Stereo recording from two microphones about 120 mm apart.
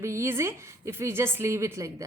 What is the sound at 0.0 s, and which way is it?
A woman's voice, 25° right (ahead or behind).